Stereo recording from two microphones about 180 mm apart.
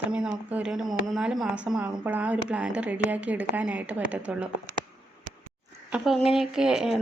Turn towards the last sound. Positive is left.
turn(degrees=-5)  # may be behind; listen again after turning